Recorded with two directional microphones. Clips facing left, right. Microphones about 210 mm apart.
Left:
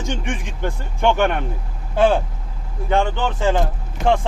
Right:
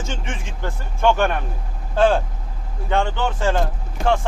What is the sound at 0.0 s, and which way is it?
Speech, 15° left (ahead or behind).